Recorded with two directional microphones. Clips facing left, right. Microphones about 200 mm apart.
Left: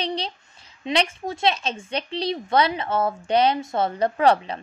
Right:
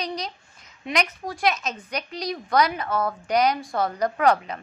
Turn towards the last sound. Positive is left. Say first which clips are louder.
# left 2 dB
turn(degrees=30)  # may be behind; listen again after turning